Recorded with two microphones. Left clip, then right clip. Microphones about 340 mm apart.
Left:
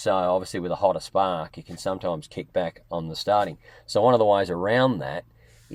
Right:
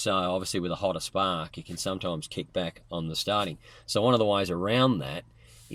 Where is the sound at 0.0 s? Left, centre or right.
Left.